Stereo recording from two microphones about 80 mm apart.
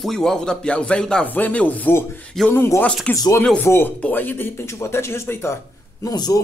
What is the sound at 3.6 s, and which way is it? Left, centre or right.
Speech, left.